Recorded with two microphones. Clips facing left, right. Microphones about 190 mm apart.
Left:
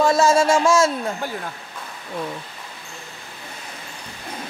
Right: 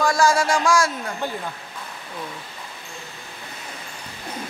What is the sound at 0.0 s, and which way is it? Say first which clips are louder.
A man's voice: left 3 dB; 25° left (ahead or behind).